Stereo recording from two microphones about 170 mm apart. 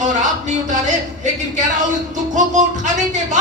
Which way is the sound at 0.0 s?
45° right (ahead or behind).